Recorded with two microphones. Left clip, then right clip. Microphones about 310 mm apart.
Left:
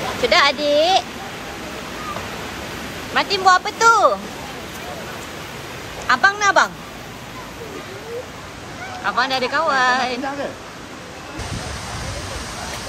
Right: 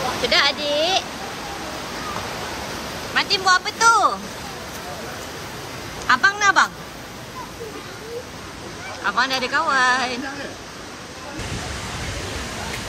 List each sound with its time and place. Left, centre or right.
0.3 s speech: centre
3.2 s speech: centre
6.0 s speech: centre
9.0 s speech: centre